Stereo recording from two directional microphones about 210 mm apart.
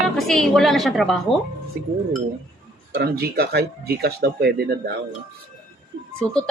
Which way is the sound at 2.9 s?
50° right (ahead or behind).